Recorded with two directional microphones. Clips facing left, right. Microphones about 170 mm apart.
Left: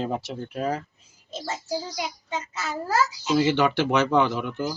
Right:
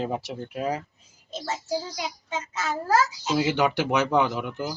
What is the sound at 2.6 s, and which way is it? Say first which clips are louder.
Speech: right 4 dB; 45° right (ahead or behind).